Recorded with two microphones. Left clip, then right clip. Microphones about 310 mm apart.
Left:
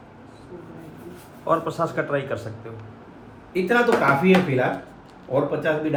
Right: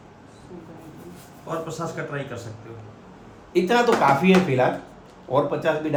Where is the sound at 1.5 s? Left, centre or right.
Centre.